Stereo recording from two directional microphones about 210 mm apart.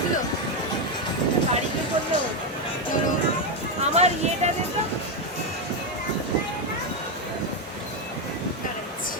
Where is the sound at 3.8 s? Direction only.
30° right (ahead or behind).